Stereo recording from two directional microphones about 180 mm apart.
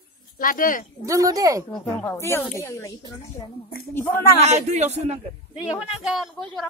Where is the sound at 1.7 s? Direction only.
15° left (ahead or behind).